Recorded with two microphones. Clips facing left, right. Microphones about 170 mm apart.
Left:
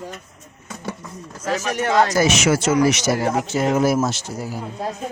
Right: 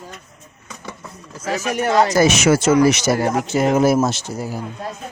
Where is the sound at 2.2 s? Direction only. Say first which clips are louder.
Right 3 dB; 40° right (ahead or behind).